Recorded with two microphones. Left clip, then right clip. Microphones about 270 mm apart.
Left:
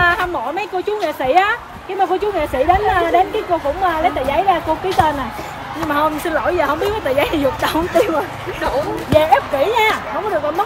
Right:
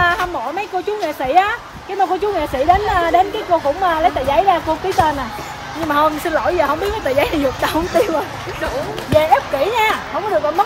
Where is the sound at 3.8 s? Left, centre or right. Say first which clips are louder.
Right 1 dB; centre.